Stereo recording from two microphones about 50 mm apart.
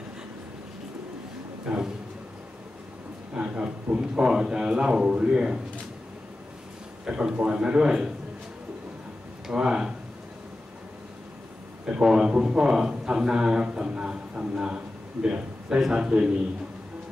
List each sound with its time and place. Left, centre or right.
3.3 s a man's voice: right
7.1 s a man's voice: right
9.5 s speech: centre
11.8 s a man's voice: centre